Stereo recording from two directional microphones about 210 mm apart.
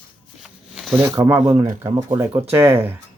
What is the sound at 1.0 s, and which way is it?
Speech, 15° right (ahead or behind).